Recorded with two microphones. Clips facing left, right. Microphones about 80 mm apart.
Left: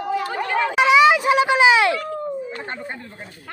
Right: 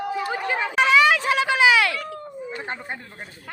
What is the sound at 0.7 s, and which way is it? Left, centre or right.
Speech, centre.